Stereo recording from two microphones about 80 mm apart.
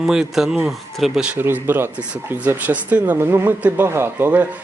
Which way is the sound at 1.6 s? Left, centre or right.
Right.